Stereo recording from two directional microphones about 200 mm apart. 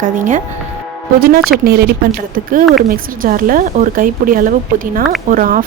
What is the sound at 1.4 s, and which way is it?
Speech, 50° right (ahead or behind).